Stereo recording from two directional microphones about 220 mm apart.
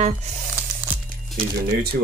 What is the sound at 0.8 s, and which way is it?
Music, 5° right (ahead or behind).